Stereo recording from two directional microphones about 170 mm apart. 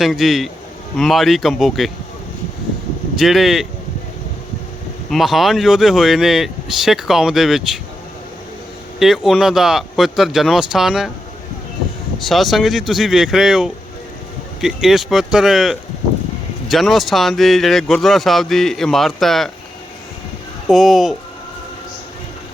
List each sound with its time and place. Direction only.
0.0 s speech: centre (ahead or behind)
3.2 s speech: centre (ahead or behind)
5.1 s speech: centre (ahead or behind)
9.0 s speech: centre (ahead or behind)
12.2 s speech: centre (ahead or behind)
20.7 s speech: centre (ahead or behind)